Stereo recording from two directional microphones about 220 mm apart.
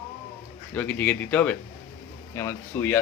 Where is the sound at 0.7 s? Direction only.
5° left (ahead or behind).